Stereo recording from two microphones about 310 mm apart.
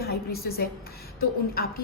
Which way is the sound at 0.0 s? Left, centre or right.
Left.